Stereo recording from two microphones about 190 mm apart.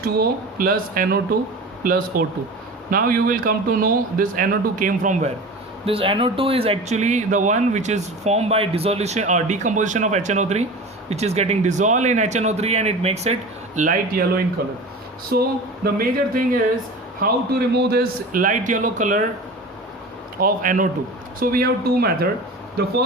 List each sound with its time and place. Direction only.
0.0 s a man's voice: 50° right (ahead or behind)
5.8 s speech: 30° right (ahead or behind)
13.7 s a man's voice: 45° right (ahead or behind)
20.4 s a man's voice: 45° right (ahead or behind)